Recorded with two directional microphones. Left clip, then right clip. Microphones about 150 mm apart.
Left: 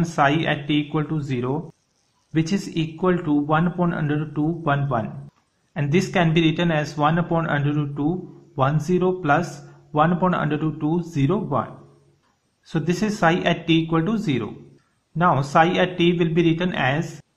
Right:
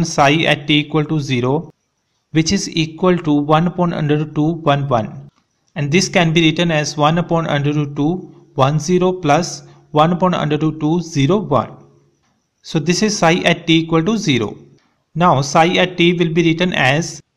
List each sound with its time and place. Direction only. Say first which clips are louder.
0.0 s a man's voice: right 7 dB; 30° right (ahead or behind)
2.3 s a man's voice: right 7 dB; 25° right (ahead or behind)
5.7 s a man's voice: right 6 dB; 25° right (ahead or behind)
8.7 s a man's voice: right 6 dB; 20° right (ahead or behind)